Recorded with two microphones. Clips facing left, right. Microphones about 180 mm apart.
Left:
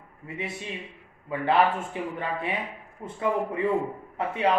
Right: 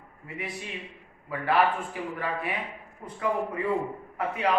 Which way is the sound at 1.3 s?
25° left (ahead or behind).